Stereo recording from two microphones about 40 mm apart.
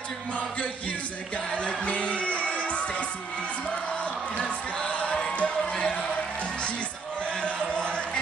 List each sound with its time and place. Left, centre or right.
1.5 s music: left
4.8 s music: left
7.4 s a sound: left